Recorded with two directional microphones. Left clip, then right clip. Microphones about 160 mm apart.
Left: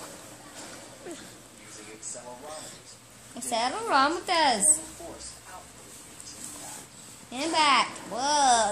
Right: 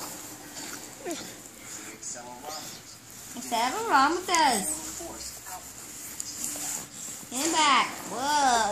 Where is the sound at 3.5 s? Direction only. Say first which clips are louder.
Right 1 dB; 15° left (ahead or behind).